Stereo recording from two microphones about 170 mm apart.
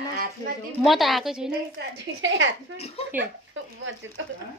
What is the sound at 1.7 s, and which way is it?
Speech, 90° right.